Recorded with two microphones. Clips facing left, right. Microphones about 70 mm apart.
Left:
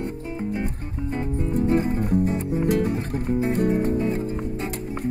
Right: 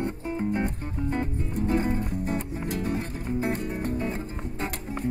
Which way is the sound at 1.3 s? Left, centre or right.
Left.